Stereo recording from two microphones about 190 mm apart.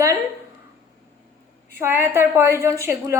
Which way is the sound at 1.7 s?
10° right (ahead or behind).